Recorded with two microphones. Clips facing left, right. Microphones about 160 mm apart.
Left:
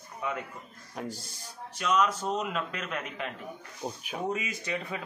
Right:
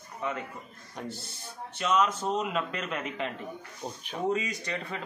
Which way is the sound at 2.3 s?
5° right (ahead or behind).